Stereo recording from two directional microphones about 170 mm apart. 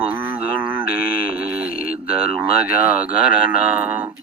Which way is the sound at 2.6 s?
55° left (ahead or behind).